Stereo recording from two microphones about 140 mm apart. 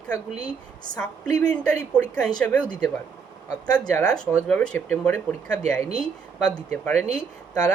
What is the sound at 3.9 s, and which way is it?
Speech, 5° left (ahead or behind).